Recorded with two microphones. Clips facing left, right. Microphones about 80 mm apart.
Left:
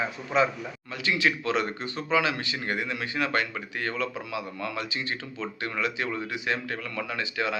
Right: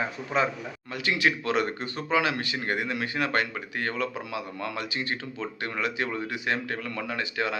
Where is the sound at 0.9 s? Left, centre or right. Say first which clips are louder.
Even; right.